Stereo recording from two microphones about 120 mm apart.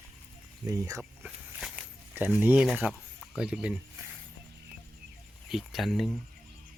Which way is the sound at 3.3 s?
5° right (ahead or behind).